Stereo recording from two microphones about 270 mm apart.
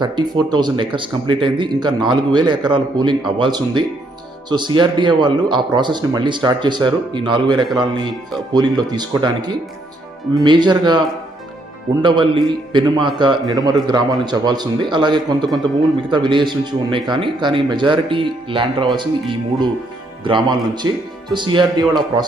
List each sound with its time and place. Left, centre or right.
0.0 s a man's voice: centre
12.0 s a man's voice: centre